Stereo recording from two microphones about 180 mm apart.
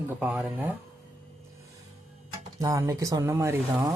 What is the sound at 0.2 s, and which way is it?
Speech, 10° right (ahead or behind).